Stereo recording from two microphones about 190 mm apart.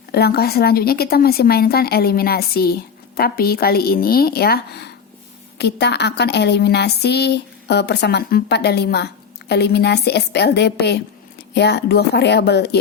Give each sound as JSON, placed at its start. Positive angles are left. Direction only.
{"t": 0.1, "sound": "a woman's voice", "side_deg": 55}